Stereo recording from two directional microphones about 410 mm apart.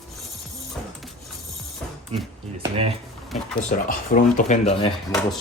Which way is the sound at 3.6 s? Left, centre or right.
Centre.